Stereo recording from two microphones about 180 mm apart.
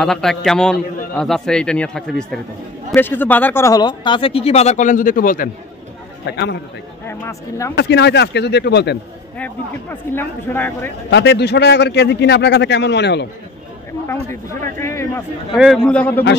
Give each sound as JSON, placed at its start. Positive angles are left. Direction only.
{"t": 0.0, "sound": "a man's voice", "side_deg": 0}
{"t": 6.2, "sound": "a man's voice", "side_deg": 70}
{"t": 7.1, "sound": "speech", "side_deg": 15}
{"t": 7.7, "sound": "a man's voice", "side_deg": 70}
{"t": 9.4, "sound": "speech", "side_deg": 10}
{"t": 11.1, "sound": "a man's voice", "side_deg": 75}
{"t": 14.6, "sound": "speech", "side_deg": 15}
{"t": 15.5, "sound": "a man's voice", "side_deg": 0}